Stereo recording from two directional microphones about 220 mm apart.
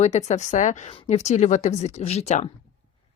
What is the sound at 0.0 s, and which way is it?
A woman's voice, 30° left (ahead or behind).